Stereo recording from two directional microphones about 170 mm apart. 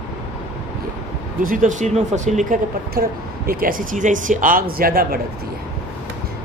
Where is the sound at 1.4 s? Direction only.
50° right (ahead or behind).